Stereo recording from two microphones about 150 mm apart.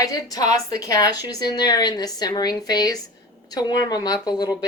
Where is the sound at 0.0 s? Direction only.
25° left (ahead or behind).